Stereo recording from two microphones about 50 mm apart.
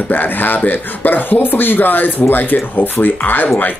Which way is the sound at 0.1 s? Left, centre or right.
Left.